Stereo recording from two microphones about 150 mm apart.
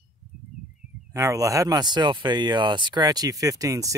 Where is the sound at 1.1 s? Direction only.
20° right (ahead or behind).